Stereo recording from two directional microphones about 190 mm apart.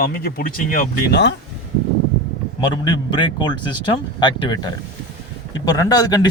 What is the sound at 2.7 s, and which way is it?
Speech, 25° left (ahead or behind).